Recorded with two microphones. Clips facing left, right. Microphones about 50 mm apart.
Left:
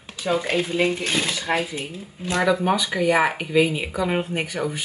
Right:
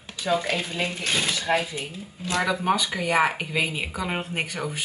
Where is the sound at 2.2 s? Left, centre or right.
Left.